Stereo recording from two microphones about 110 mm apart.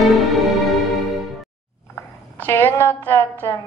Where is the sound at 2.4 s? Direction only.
20° left (ahead or behind).